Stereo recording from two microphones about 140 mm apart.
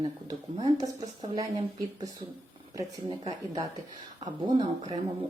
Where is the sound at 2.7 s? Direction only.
25° right (ahead or behind).